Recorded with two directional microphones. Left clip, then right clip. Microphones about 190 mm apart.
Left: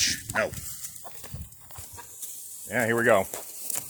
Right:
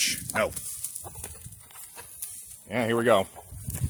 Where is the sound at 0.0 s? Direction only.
35° right (ahead or behind).